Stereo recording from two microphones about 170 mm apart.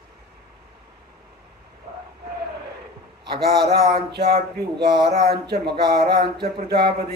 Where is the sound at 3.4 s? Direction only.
65° right (ahead or behind).